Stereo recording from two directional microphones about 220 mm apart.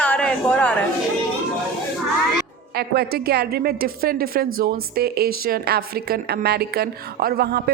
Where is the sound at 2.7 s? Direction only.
45° right (ahead or behind).